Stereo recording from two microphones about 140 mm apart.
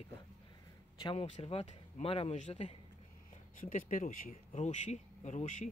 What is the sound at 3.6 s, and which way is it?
Speech, 70° left (ahead or behind).